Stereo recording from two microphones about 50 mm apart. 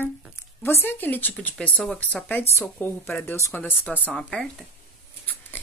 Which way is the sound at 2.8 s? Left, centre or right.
Left.